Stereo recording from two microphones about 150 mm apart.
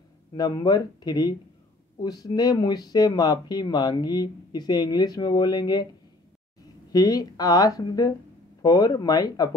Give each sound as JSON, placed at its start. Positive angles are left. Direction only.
{"t": 0.3, "sound": "speech", "side_deg": 25}
{"t": 6.9, "sound": "speech", "side_deg": 25}